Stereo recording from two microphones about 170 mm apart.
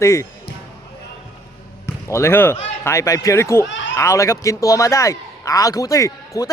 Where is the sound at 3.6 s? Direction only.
90° left.